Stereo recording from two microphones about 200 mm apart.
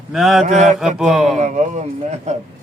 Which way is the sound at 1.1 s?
Centre (ahead or behind).